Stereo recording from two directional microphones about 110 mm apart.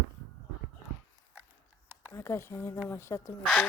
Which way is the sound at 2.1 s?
25° left (ahead or behind).